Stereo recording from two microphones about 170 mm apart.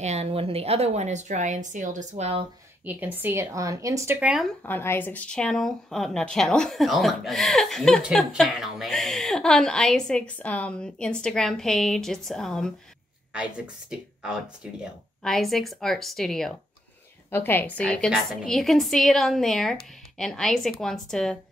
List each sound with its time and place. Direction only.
0.0 s a woman's voice: 40° right (ahead or behind)
2.8 s a woman's voice: 10° right (ahead or behind)
4.2 s speech: 5° right (ahead or behind)
4.6 s speech: 10° left (ahead or behind)
17.3 s speech: 15° left (ahead or behind)